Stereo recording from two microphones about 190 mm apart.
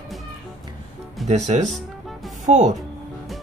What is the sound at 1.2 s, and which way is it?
Speech, 35° right (ahead or behind).